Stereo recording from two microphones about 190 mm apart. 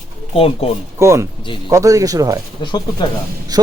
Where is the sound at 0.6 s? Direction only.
30° left (ahead or behind).